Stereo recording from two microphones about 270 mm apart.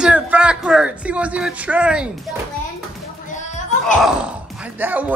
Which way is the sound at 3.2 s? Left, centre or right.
Left.